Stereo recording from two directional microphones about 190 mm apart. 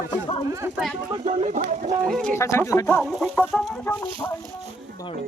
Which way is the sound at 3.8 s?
10° left (ahead or behind).